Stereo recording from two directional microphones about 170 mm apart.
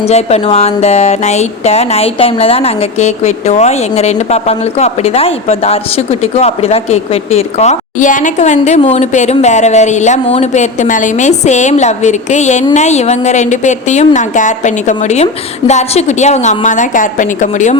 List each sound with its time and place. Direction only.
0.0 s a woman's voice: 40° left (ahead or behind)